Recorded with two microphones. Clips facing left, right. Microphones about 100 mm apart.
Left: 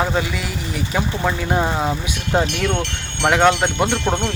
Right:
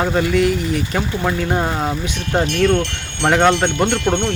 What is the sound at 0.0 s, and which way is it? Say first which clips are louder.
Speech: right 5 dB; 5° left (ahead or behind).